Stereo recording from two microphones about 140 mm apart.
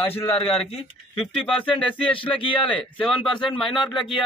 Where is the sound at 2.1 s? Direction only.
40° left (ahead or behind).